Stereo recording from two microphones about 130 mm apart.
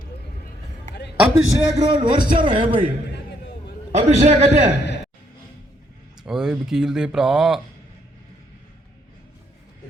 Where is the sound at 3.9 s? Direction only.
65° right (ahead or behind).